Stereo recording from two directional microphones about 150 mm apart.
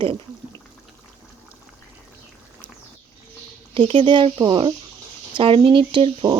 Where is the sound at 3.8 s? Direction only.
35° right (ahead or behind).